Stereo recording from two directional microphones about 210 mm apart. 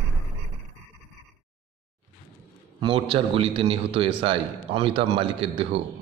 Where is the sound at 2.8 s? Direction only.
25° right (ahead or behind).